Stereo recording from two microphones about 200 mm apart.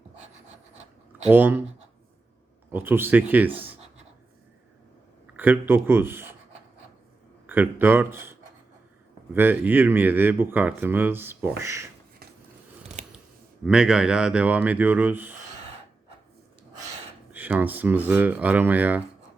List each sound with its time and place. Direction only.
1.3 s speech: 10° right (ahead or behind)
2.7 s speech: 10° right (ahead or behind)
5.4 s speech: 10° right (ahead or behind)
7.4 s speech: 10° right (ahead or behind)
13.7 s speech: 5° right (ahead or behind)
17.3 s speech: 10° right (ahead or behind)